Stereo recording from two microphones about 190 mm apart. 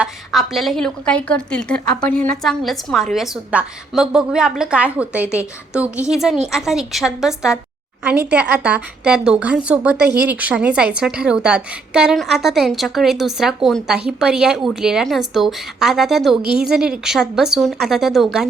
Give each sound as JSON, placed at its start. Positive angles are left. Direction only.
{"t": 0.0, "sound": "a woman's voice", "side_deg": 0}
{"t": 16.4, "sound": "a woman's voice", "side_deg": -55}
{"t": 16.6, "sound": "a woman's voice", "side_deg": -5}